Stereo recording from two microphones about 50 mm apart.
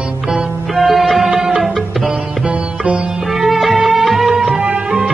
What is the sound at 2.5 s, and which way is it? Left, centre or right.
Sitar, right.